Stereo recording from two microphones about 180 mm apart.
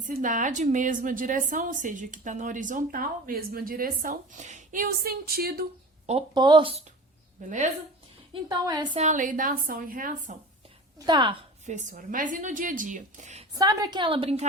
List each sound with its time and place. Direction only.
0.0 s a woman's voice: 45° right (ahead or behind)
6.1 s a woman's voice: 30° right (ahead or behind)
7.4 s a woman's voice: 45° right (ahead or behind)
8.3 s a woman's voice: 20° right (ahead or behind)
9.0 s a woman's voice: 45° right (ahead or behind)
11.0 s a woman's voice: 25° right (ahead or behind)
11.6 s a woman's voice: 40° right (ahead or behind)
13.6 s a woman's voice: 20° right (ahead or behind)